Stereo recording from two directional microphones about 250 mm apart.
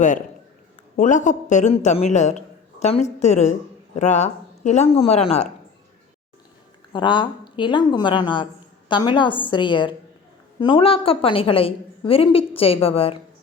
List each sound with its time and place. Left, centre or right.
0.9 s a woman's voice: left
6.9 s a woman's voice: centre